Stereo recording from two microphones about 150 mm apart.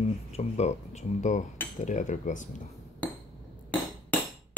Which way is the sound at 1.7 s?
55° left (ahead or behind).